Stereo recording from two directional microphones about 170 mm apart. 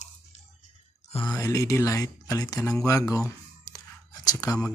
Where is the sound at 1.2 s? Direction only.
15° left (ahead or behind).